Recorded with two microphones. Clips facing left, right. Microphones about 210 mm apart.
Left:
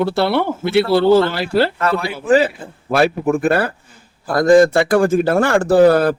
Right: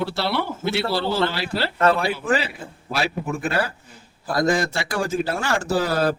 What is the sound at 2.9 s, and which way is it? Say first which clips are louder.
A man's voice: left 10 dB; 55° left (ahead or behind).